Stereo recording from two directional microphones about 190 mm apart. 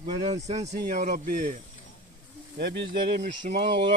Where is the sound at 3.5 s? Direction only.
45° right (ahead or behind).